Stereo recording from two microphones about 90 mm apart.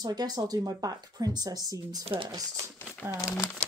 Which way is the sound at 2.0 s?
90° right.